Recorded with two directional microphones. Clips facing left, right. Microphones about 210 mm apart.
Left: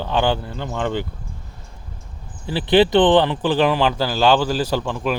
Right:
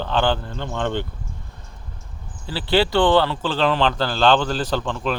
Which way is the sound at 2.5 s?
20° left (ahead or behind).